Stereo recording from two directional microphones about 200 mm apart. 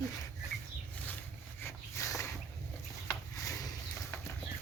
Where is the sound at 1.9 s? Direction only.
15° left (ahead or behind).